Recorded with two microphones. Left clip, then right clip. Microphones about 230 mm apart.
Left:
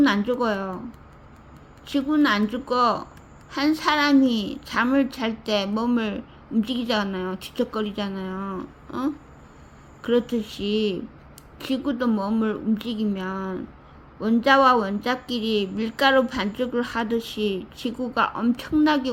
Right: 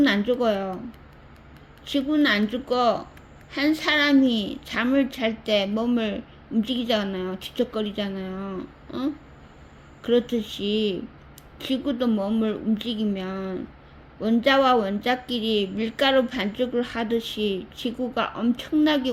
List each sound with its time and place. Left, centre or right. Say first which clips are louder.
0.0 s a woman's voice: even; centre
1.9 s a woman's voice: even; centre
4.3 s speech: even; left
4.7 s a woman's voice: left 2 dB; centre
10.4 s speech: right 1 dB; left
11.6 s a woman's voice: even; centre
15.3 s speech: right 1 dB; left
15.6 s a woman's voice: left 2 dB; centre
17.1 s speech: even; left
17.8 s a woman's voice: left 3 dB; centre